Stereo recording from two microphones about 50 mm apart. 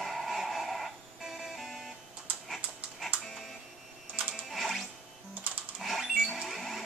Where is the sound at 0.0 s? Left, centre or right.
Centre.